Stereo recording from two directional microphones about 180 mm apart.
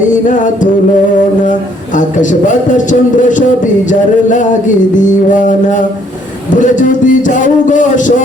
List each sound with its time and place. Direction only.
0.1 s music: 45° left (ahead or behind)
2.0 s music: 45° left (ahead or behind)